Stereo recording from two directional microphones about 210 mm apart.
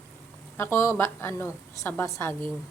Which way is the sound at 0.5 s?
10° left (ahead or behind).